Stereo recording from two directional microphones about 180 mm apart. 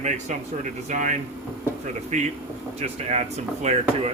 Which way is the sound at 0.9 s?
45° right (ahead or behind).